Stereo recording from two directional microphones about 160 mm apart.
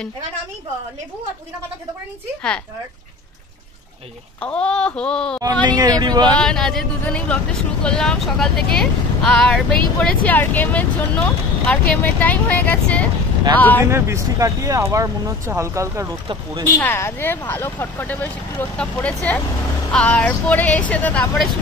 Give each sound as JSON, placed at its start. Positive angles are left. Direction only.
{"t": 4.4, "sound": "speech", "side_deg": 5}
{"t": 5.4, "sound": "speech", "side_deg": -25}
{"t": 6.4, "sound": "speech", "side_deg": 5}
{"t": 13.8, "sound": "speech", "side_deg": -15}
{"t": 16.7, "sound": "speech", "side_deg": 15}